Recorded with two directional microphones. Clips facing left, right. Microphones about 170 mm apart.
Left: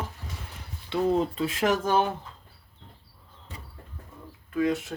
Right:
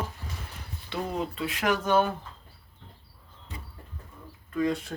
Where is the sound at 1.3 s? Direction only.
35° left (ahead or behind).